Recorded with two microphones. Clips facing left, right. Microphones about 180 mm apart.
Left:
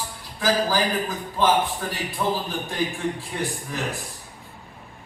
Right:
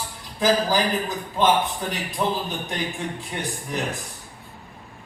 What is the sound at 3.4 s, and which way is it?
Speech, 20° right (ahead or behind).